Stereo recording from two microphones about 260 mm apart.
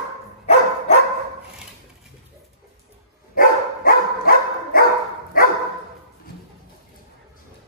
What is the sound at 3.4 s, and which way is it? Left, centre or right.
Dog, left.